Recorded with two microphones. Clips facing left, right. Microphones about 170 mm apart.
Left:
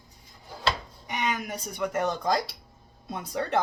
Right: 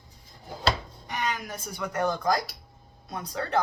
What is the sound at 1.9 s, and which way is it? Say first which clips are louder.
Speech: right 1 dB; 25° left (ahead or behind).